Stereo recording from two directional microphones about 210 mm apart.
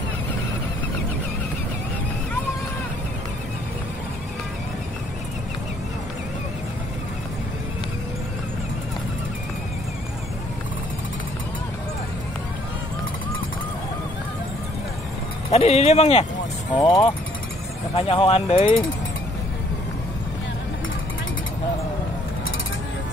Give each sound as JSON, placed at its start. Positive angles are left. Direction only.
{"t": 15.5, "sound": "speech", "side_deg": 30}